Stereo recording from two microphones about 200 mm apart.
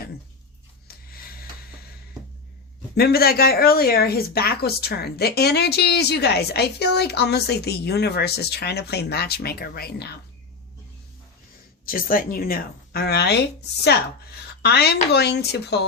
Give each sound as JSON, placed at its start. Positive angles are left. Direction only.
{"t": 0.9, "sound": "a sound", "side_deg": 50}
{"t": 2.9, "sound": "speech", "side_deg": 50}
{"t": 11.9, "sound": "speech", "side_deg": 45}